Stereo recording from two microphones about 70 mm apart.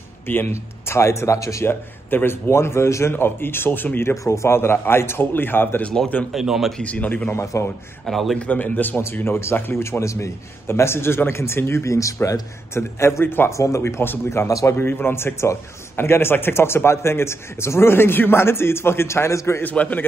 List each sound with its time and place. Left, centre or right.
0.3 s speech: left
1.7 s a man's voice: left
2.5 s speech: left
4.1 s speech: left
6.3 s speech: centre
6.8 s a man's voice: left
7.2 s speech: left
8.0 s speech: centre
8.4 s speech: left
13.5 s speech: left
14.5 s a man's voice: left
14.8 s speech: left
19.6 s a man's voice: left